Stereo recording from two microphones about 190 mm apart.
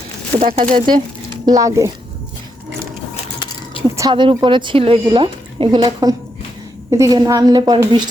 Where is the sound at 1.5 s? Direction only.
15° right (ahead or behind).